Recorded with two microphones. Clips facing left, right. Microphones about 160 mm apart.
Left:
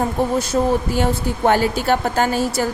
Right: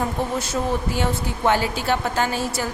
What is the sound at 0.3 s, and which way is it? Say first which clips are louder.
A woman's voice: left 6 dB; 40° left (ahead or behind).